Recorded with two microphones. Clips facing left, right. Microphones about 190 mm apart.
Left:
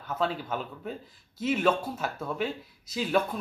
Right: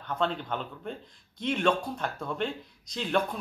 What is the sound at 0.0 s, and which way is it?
A man's voice, 5° left (ahead or behind).